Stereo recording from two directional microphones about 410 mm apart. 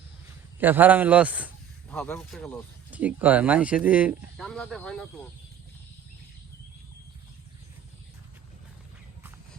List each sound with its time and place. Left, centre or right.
0.6 s a man's voice: centre